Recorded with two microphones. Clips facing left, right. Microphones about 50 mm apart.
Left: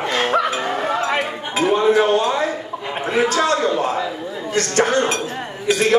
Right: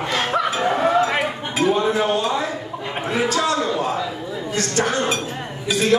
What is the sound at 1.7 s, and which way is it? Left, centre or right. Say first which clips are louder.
A man's voice: left 4 dB; left.